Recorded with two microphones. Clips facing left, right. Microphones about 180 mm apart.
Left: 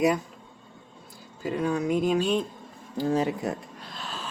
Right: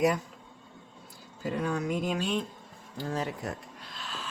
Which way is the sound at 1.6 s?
20° left (ahead or behind).